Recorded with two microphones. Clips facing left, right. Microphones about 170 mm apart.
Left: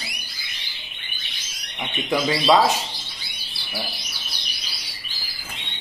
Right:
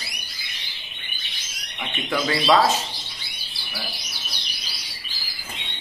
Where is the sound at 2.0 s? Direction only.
15° left (ahead or behind).